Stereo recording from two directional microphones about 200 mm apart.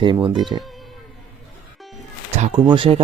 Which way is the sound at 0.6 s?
Centre (ahead or behind).